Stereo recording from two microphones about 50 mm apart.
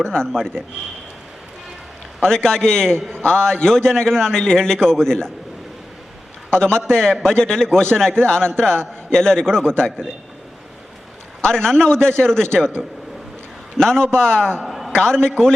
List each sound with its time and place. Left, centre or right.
0.0 s a man's voice: centre
2.2 s a man's voice: centre
6.6 s a man's voice: centre
8.7 s a man's voice: right
9.1 s a man's voice: centre
11.4 s a man's voice: centre
13.7 s a man's voice: centre
14.6 s a sound: centre
14.9 s a man's voice: centre